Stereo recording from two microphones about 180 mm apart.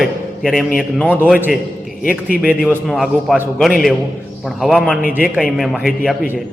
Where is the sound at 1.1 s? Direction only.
10° right (ahead or behind).